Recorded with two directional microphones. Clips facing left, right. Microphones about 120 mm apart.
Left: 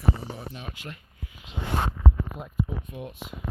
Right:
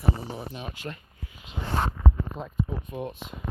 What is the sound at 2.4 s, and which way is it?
Speech, 30° right (ahead or behind).